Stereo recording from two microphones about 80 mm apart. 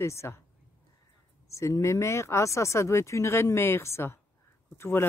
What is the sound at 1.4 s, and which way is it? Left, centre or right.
Speech, left.